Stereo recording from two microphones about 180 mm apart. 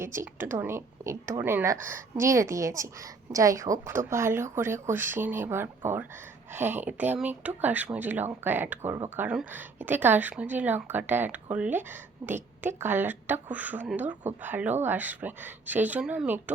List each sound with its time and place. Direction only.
0.0 s speech: 15° right (ahead or behind)